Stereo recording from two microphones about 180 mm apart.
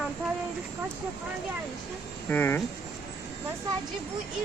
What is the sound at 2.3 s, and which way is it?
Speech, 10° left (ahead or behind).